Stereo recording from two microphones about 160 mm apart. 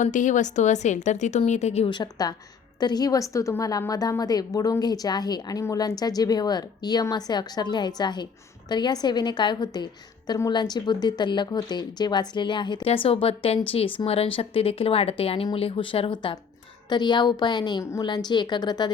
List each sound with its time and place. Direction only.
0.0 s speech: 50° left (ahead or behind)
1.9 s a woman's voice: 25° left (ahead or behind)